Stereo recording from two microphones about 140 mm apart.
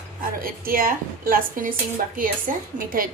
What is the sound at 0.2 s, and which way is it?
A woman's voice, 90° right.